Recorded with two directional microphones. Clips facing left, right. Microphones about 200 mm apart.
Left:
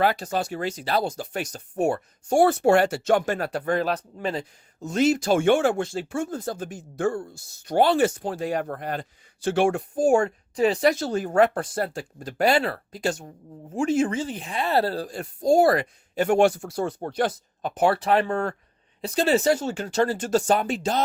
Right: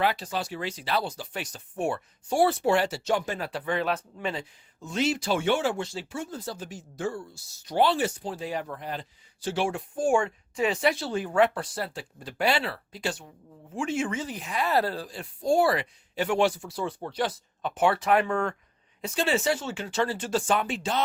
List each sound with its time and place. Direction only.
0.0 s speech: 45° left (ahead or behind)
15.0 s speech: 45° left (ahead or behind)